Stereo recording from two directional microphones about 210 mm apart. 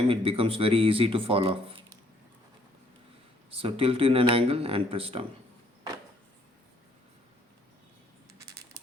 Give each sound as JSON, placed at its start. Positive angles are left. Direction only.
{"t": 0.1, "sound": "speech", "side_deg": -25}
{"t": 3.5, "sound": "speech", "side_deg": -25}
{"t": 8.3, "sound": "coin", "side_deg": -15}